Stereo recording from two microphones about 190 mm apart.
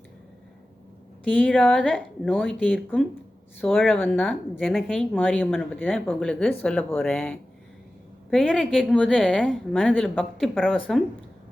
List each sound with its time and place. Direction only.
1.2 s a woman's voice: 5° left (ahead or behind)